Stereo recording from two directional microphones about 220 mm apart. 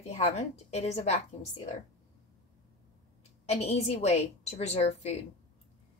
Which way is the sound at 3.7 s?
30° left (ahead or behind).